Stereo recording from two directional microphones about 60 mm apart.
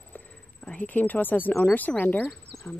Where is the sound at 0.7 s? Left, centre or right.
Left.